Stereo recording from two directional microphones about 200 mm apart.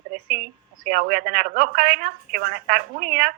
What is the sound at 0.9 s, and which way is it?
Speech, 45° right (ahead or behind).